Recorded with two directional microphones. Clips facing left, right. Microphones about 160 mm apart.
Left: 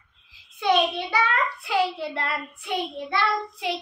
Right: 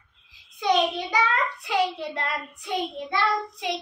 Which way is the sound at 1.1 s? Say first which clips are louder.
Even; 20° right (ahead or behind).